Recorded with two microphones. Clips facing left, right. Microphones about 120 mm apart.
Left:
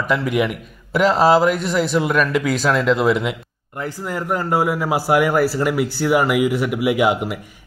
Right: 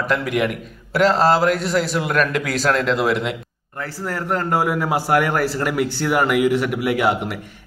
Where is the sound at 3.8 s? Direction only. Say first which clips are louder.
Left 1 dB; 15° left (ahead or behind).